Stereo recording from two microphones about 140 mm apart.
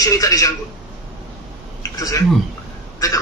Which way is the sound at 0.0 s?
25° left (ahead or behind).